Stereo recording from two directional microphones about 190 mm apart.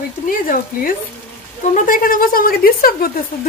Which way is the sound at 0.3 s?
50° left (ahead or behind).